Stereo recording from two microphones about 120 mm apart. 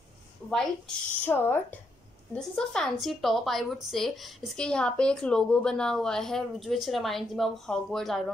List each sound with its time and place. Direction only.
0.5 s a woman's voice: 5° left (ahead or behind)
1.2 s speech: 15° left (ahead or behind)
2.3 s a woman's voice: 5° left (ahead or behind)